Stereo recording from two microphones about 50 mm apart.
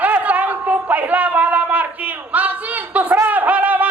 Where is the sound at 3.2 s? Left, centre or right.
Right.